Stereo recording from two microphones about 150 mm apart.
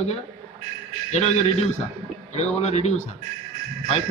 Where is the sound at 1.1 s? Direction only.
50° left (ahead or behind).